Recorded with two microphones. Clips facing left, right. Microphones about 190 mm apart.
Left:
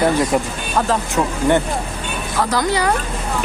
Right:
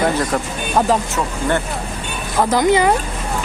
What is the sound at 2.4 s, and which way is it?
Speech, 20° right (ahead or behind).